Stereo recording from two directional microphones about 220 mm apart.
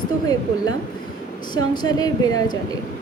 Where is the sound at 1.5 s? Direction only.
20° left (ahead or behind).